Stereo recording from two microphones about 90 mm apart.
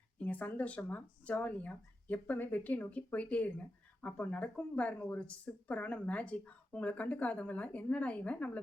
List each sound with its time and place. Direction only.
0.2 s speech: 15° left (ahead or behind)